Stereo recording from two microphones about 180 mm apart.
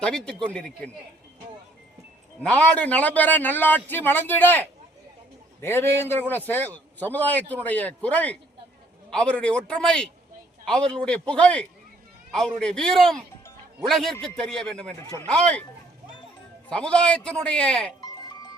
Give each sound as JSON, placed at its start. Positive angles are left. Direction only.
{"t": 0.0, "sound": "a man's voice", "side_deg": 5}
{"t": 2.4, "sound": "a man's voice", "side_deg": 5}
{"t": 16.6, "sound": "a man's voice", "side_deg": 5}
{"t": 18.0, "sound": "sheep", "side_deg": 20}